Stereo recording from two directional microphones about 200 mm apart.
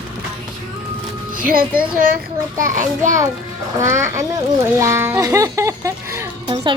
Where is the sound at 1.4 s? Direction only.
45° right (ahead or behind).